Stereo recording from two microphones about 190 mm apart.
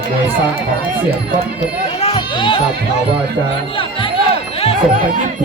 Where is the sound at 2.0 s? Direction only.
30° left (ahead or behind).